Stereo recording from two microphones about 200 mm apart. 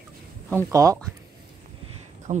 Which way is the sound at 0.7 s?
15° right (ahead or behind).